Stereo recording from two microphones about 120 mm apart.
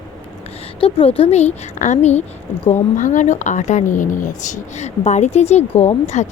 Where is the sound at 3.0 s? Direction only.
90° left.